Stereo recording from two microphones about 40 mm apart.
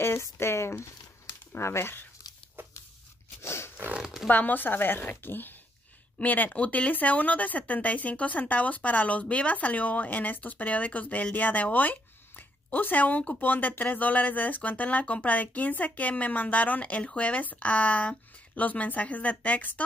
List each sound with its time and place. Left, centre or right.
0.0 s speech: left
1.5 s speech: left
3.4 s a sound: left
4.0 s zipper: centre
4.3 s speech: left
6.1 s speech: left